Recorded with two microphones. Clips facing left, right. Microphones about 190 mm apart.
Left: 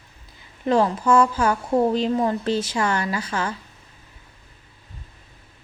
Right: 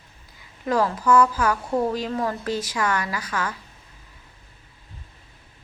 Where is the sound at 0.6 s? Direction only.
25° left (ahead or behind).